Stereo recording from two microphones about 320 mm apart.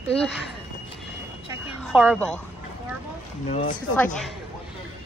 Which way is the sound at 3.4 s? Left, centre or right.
Centre.